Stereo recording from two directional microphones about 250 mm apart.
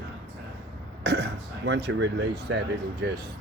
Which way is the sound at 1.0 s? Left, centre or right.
Right.